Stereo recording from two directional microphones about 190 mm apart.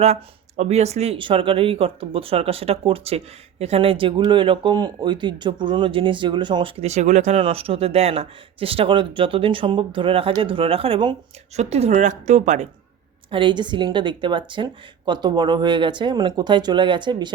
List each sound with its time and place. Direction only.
0.0 s speech: 35° right (ahead or behind)
13.3 s speech: 25° right (ahead or behind)